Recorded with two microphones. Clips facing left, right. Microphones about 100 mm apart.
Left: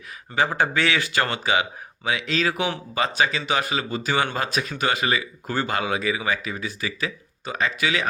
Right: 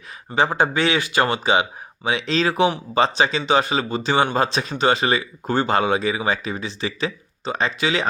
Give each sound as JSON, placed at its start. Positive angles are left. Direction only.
{"t": 0.3, "sound": "speech", "side_deg": -20}